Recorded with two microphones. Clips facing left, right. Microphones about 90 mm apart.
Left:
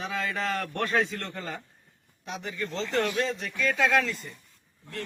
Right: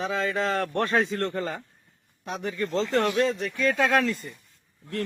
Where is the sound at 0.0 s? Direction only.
30° right (ahead or behind).